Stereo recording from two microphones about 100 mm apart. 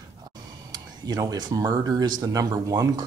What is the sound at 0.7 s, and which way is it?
Speech, 40° right (ahead or behind).